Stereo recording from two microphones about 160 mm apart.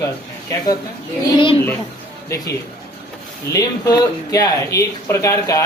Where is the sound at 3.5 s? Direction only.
20° left (ahead or behind).